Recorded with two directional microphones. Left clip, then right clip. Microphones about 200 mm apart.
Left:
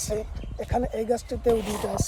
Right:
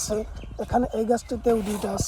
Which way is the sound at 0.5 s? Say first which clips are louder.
Right 3 dB; 30° right (ahead or behind).